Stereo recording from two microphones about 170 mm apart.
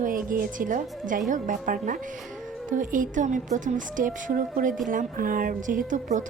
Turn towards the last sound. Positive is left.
turn(degrees=-45)  # may be behind; listen again after turning